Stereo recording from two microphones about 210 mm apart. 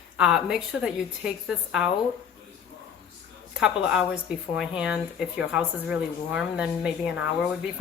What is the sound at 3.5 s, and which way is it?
A woman's voice, 5° right (ahead or behind).